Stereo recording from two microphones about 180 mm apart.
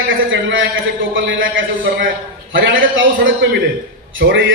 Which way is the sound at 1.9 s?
60° right (ahead or behind).